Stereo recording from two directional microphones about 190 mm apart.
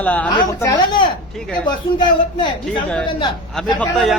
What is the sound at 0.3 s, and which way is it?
Speech, 20° left (ahead or behind).